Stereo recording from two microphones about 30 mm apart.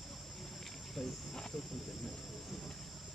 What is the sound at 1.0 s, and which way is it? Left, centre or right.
Cricket, left.